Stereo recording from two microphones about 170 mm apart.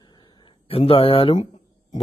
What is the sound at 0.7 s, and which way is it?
Speech, 35° left (ahead or behind).